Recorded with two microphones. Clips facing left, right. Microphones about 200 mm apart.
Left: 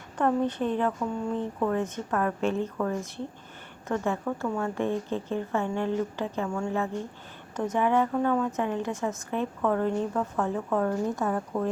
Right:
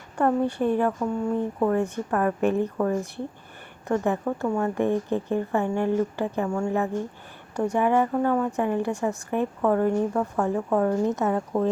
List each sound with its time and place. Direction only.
0.2 s a woman's voice: 10° right (ahead or behind)